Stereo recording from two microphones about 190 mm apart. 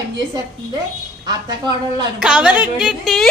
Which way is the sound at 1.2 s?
20° right (ahead or behind).